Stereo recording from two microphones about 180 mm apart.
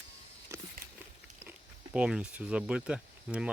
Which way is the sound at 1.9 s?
5° right (ahead or behind).